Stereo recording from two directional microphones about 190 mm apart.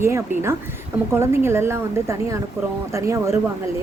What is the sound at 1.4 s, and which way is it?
Speech, 15° right (ahead or behind).